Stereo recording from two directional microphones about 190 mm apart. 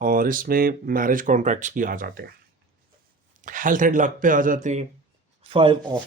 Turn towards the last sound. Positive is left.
turn(degrees=-30)  # may be behind; listen again after turning